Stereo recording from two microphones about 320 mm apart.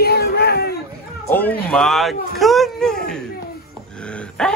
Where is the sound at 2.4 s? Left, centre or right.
Centre.